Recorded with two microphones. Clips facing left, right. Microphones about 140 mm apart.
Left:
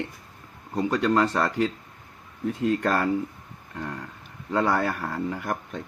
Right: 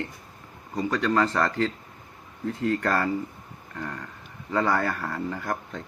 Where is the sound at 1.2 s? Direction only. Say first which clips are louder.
Left 1 dB; 15° left (ahead or behind).